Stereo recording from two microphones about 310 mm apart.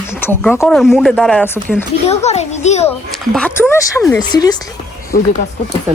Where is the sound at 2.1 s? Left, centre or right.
Left.